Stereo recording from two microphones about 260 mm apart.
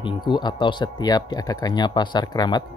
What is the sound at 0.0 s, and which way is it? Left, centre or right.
Speech, centre.